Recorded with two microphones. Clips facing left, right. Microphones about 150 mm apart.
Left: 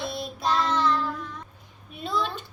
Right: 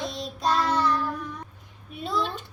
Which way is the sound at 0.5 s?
10° right (ahead or behind).